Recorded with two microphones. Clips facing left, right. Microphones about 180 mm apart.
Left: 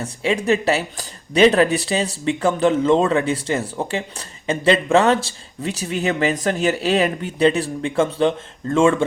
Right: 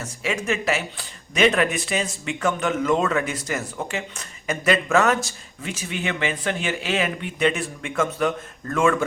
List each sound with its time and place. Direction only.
0.0 s speech: 30° left (ahead or behind)